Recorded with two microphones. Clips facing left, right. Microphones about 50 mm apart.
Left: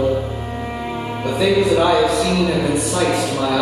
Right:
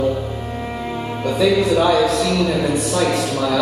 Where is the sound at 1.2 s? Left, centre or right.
Centre.